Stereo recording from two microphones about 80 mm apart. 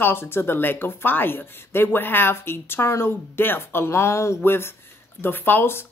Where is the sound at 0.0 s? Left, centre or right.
Left.